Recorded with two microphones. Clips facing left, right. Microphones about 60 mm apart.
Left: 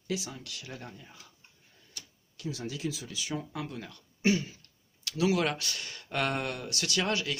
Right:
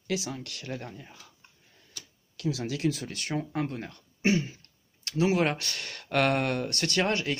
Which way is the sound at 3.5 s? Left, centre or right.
Right.